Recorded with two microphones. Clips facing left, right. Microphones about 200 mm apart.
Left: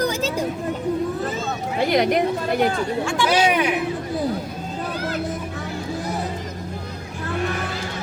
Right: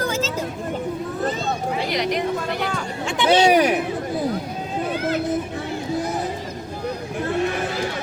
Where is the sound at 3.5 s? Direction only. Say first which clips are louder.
Right 4 dB; 40° right (ahead or behind).